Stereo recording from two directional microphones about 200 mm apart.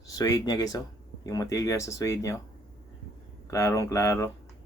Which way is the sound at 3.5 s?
15° left (ahead or behind).